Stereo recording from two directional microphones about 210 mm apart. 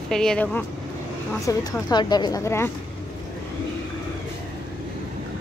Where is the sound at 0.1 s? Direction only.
5° left (ahead or behind).